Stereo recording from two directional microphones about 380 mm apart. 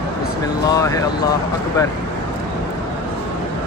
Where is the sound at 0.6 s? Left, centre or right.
Centre.